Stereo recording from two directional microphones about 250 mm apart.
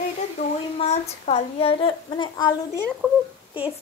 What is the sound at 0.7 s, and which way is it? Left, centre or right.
Speech, left.